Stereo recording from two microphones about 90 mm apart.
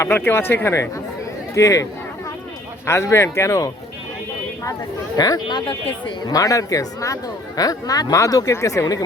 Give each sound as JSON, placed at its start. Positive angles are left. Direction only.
{"t": 0.0, "sound": "speech", "side_deg": 25}
{"t": 5.1, "sound": "speech", "side_deg": 45}
{"t": 5.5, "sound": "speech", "side_deg": 70}
{"t": 6.2, "sound": "speech", "side_deg": 40}